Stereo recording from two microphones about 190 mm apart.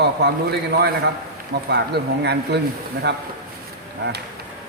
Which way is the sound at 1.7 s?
60° right (ahead or behind).